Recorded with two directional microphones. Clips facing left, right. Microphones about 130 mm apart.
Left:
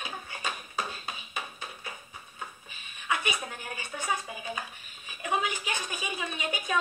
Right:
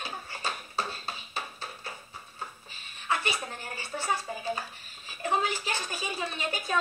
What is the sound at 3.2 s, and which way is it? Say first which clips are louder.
Dishes: even; 15° left (ahead or behind).